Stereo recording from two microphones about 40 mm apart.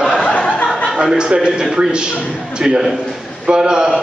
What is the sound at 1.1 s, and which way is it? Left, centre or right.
A man's voice, right.